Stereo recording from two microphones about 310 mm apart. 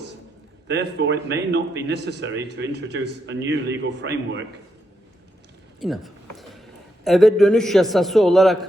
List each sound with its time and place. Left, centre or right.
0.7 s a man's voice: right
5.8 s a sound: centre
7.0 s a man's voice: centre